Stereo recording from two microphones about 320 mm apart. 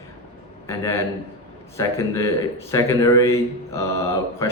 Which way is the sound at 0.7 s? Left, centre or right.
Centre.